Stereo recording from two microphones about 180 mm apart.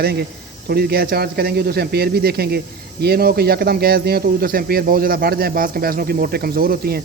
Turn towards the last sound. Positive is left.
turn(degrees=-55)  # may be behind; listen again after turning